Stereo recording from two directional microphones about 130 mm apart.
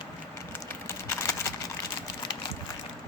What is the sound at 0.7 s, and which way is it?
Typing, 20° left (ahead or behind).